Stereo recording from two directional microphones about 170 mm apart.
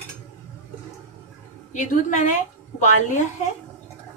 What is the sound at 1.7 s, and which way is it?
A woman's voice, 45° left (ahead or behind).